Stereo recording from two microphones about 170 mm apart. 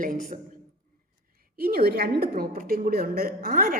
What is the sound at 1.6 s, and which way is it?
A woman's voice, 60° right (ahead or behind).